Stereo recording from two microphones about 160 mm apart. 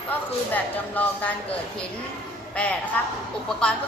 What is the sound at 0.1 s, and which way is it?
A woman's voice, 10° left (ahead or behind).